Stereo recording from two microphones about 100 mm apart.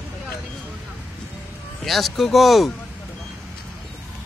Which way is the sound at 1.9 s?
Centre (ahead or behind).